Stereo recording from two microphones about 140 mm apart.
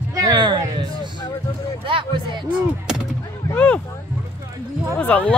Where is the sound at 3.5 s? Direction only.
10° left (ahead or behind).